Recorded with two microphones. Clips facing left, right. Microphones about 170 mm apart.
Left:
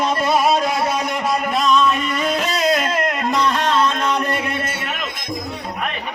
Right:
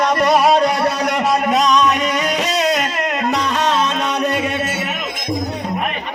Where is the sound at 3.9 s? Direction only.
75° right (ahead or behind).